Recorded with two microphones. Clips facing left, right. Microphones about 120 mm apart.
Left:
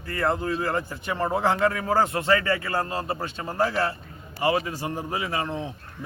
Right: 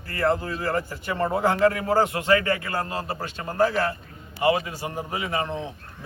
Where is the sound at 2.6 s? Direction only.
30° left (ahead or behind).